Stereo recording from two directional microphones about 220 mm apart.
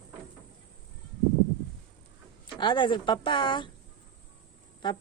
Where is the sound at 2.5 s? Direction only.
20° left (ahead or behind).